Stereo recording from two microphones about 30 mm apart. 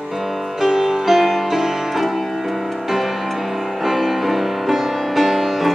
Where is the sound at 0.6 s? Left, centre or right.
Centre.